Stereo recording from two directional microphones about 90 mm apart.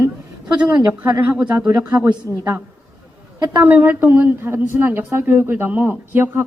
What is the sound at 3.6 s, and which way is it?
A woman's voice, 20° right (ahead or behind).